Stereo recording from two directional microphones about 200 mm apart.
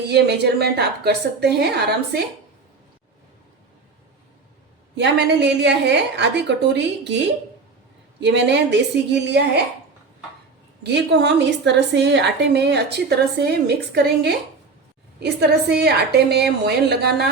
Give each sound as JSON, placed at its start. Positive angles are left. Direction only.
{"t": 0.1, "sound": "a woman's voice", "side_deg": -55}
{"t": 4.9, "sound": "a woman's voice", "side_deg": -60}
{"t": 8.2, "sound": "a woman's voice", "side_deg": -60}
{"t": 10.8, "sound": "a woman's voice", "side_deg": -60}